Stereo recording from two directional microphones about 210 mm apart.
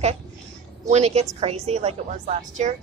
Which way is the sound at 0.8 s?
30° right (ahead or behind).